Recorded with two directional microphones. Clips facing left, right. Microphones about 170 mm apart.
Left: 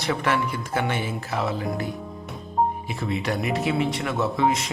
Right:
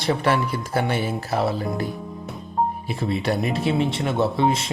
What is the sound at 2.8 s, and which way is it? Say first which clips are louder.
Speech: right 3 dB; 35° right (ahead or behind).